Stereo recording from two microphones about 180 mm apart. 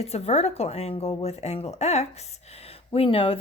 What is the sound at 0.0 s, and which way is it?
A woman's voice, 35° left (ahead or behind).